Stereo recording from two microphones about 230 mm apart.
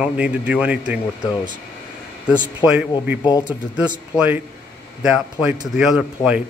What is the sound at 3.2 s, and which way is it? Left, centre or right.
Speech, centre.